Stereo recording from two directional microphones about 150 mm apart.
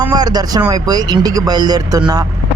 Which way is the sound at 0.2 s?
25° right (ahead or behind).